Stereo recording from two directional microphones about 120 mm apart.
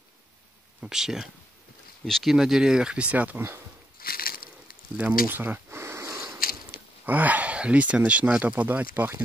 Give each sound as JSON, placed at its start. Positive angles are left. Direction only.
{"t": 0.7, "sound": "speech", "side_deg": -5}
{"t": 4.9, "sound": "a sound", "side_deg": -15}
{"t": 7.1, "sound": "speech", "side_deg": -15}